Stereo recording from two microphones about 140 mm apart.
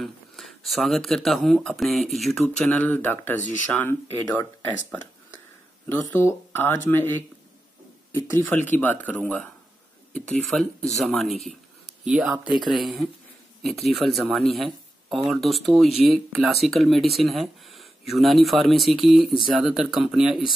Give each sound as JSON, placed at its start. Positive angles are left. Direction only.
{"t": 0.0, "sound": "speech", "side_deg": 0}
{"t": 5.9, "sound": "speech", "side_deg": 15}
{"t": 8.6, "sound": "speech", "side_deg": 10}